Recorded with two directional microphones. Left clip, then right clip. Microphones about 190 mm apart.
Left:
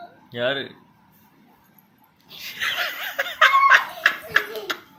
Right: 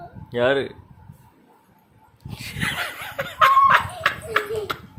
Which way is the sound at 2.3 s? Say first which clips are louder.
Left 1 dB; 30° right (ahead or behind).